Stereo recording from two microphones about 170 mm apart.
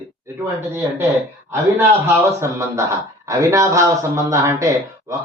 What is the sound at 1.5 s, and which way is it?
A man's voice, 15° right (ahead or behind).